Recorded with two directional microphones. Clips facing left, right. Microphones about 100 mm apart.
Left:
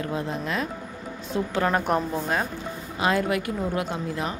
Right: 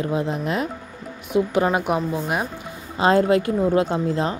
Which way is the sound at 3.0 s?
30° right (ahead or behind).